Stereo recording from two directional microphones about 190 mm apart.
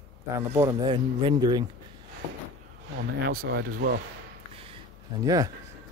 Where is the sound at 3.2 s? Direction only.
55° right (ahead or behind).